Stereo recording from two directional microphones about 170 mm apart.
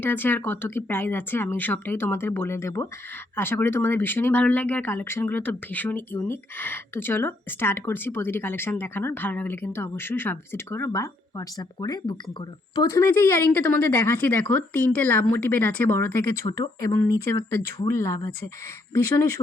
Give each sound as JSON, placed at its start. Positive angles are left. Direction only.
{"t": 0.0, "sound": "speech", "side_deg": 10}